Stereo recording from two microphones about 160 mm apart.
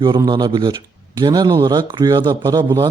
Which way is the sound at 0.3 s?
25° right (ahead or behind).